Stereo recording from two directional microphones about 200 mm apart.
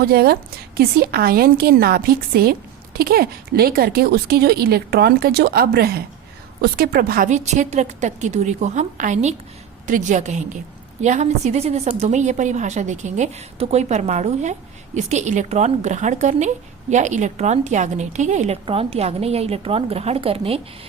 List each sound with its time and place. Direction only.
0.0 s a woman's voice: 50° right (ahead or behind); by 20.6 s 30° right (ahead or behind)